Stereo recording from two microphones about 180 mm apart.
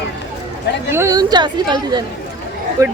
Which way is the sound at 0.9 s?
15° right (ahead or behind).